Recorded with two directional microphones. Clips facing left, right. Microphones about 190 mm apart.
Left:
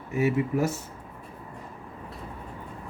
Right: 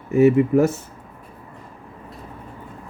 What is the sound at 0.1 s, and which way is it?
Speech, 50° right (ahead or behind).